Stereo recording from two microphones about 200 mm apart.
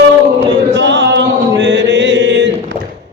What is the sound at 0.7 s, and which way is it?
Chant, 60° right (ahead or behind).